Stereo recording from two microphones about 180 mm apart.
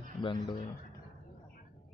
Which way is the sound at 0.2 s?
30° left (ahead or behind).